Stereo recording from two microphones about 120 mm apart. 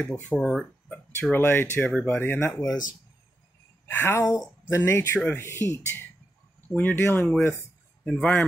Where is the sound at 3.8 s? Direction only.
20° left (ahead or behind).